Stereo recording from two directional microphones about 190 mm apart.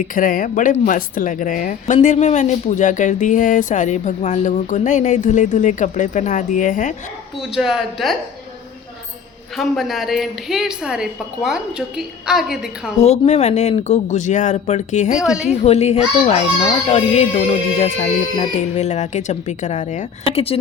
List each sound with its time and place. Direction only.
0.1 s speech: 45° left (ahead or behind)
7.5 s a woman's voice: centre (ahead or behind)
9.6 s a woman's voice: centre (ahead or behind)
13.0 s speech: 35° left (ahead or behind)
15.2 s a woman's voice: 5° right (ahead or behind)
15.6 s speech: 35° left (ahead or behind)